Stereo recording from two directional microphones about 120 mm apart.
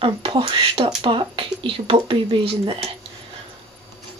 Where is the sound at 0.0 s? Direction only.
50° right (ahead or behind).